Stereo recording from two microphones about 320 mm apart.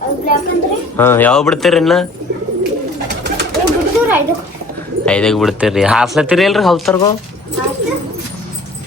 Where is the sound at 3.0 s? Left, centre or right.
Right.